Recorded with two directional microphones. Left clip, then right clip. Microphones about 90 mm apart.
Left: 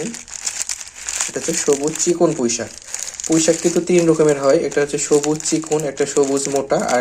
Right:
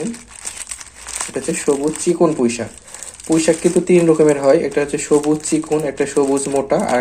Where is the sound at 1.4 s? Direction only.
15° left (ahead or behind).